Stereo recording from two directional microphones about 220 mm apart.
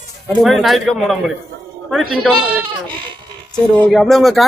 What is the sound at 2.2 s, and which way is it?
Speech, 5° right (ahead or behind).